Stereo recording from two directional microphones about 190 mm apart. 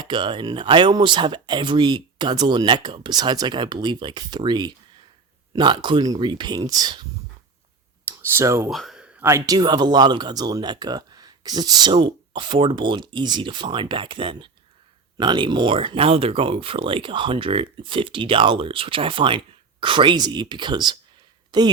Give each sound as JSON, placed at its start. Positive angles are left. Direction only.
{"t": 0.0, "sound": "speech", "side_deg": -25}
{"t": 8.0, "sound": "a sound", "side_deg": -15}
{"t": 8.7, "sound": "speech", "side_deg": 0}